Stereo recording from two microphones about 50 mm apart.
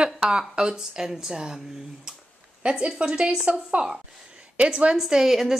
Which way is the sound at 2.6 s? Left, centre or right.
Centre.